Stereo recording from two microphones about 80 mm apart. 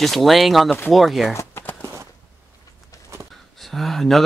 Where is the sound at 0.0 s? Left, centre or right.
Centre.